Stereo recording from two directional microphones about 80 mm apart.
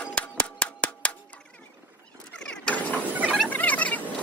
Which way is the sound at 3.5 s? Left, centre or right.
Left.